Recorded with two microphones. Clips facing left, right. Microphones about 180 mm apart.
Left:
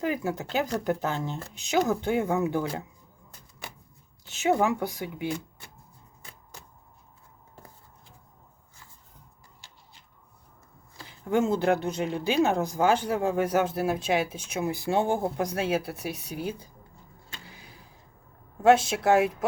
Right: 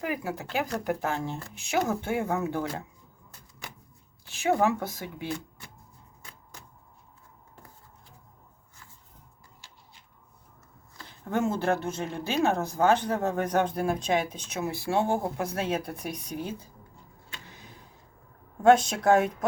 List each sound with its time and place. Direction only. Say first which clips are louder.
0.0 s speech: left 3 dB; 25° left (ahead or behind)
4.3 s speech: left 1 dB; 20° left (ahead or behind)
11.3 s speech: left 3 dB; 15° left (ahead or behind)
17.5 s a sound: right 1 dB; 10° left (ahead or behind)
18.6 s speech: even; 5° left (ahead or behind)